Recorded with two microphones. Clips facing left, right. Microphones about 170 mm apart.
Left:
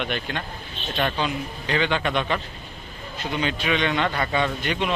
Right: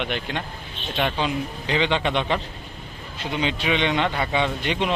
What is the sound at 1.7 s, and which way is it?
A man's voice, 25° right (ahead or behind).